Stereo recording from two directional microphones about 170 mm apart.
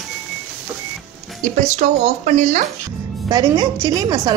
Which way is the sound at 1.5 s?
45° right (ahead or behind).